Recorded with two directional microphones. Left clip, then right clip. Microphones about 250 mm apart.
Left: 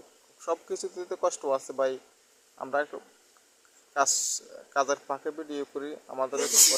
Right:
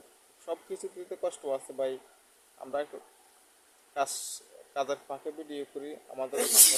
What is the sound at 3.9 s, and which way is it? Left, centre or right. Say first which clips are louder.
A man's voice: left 6 dB; centre.